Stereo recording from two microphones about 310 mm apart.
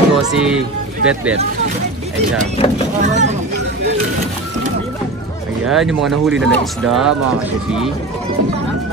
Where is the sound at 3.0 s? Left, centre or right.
Right.